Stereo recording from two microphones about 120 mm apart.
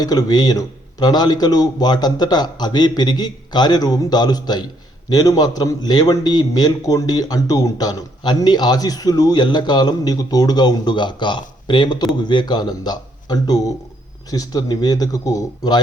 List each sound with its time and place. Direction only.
0.0 s a man's voice: 35° left (ahead or behind)